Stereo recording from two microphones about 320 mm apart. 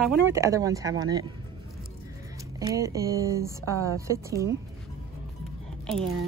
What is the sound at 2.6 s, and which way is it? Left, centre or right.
Speech, centre.